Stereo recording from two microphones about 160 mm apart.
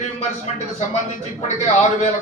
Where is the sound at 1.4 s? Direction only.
45° left (ahead or behind).